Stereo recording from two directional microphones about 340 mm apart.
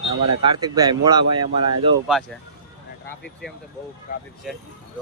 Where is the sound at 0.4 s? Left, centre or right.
Centre.